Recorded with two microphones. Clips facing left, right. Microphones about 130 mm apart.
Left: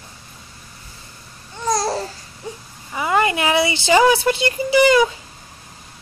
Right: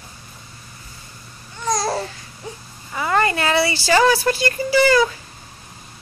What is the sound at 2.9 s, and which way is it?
Speech, 15° left (ahead or behind).